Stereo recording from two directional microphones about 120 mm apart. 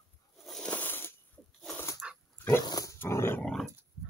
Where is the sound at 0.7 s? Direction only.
15° left (ahead or behind).